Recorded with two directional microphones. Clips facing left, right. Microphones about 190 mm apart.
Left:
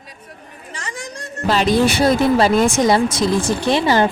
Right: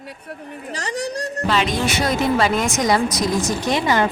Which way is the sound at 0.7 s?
40° right (ahead or behind).